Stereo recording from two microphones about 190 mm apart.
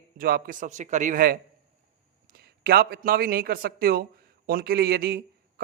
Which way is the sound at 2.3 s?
55° right (ahead or behind).